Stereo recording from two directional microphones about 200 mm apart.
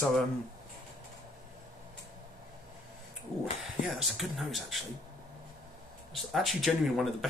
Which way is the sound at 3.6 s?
Centre (ahead or behind).